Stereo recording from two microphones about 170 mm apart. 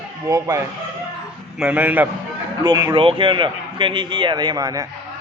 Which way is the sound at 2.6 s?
20° right (ahead or behind).